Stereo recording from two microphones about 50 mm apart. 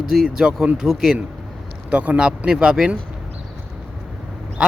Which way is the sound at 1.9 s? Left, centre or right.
Right.